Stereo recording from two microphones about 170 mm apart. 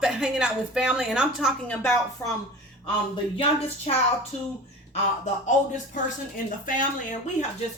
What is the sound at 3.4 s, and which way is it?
Speech, 35° left (ahead or behind).